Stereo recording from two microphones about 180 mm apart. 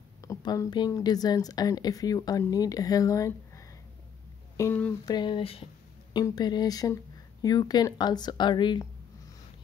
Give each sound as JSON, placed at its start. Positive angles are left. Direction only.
{"t": 0.2, "sound": "a woman's voice", "side_deg": 20}
{"t": 5.0, "sound": "a woman's voice", "side_deg": 25}